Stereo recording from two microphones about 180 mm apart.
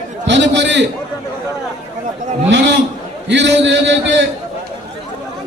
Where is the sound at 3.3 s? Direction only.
75° right (ahead or behind).